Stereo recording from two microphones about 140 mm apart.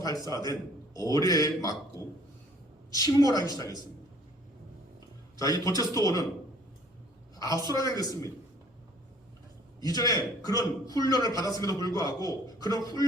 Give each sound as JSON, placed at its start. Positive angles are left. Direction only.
{"t": 0.0, "sound": "a man's voice", "side_deg": 25}
{"t": 2.9, "sound": "a man's voice", "side_deg": 25}
{"t": 5.4, "sound": "a man's voice", "side_deg": 25}
{"t": 7.3, "sound": "a woman's voice", "side_deg": 25}
{"t": 9.8, "sound": "a man's voice", "side_deg": 25}